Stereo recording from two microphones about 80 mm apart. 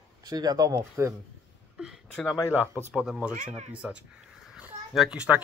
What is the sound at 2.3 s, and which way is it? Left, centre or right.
Speech, left.